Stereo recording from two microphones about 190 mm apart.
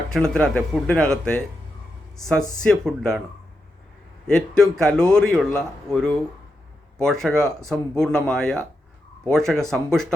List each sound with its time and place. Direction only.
0.1 s a man's voice: 5° left (ahead or behind)
2.6 s a man's voice: 5° left (ahead or behind)
4.3 s a man's voice: 5° left (ahead or behind)